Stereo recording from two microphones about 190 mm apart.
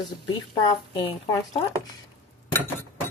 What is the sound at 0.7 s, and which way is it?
Speech, 20° left (ahead or behind).